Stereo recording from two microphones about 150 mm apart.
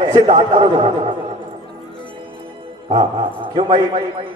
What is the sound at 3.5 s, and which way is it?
Speech, 30° right (ahead or behind).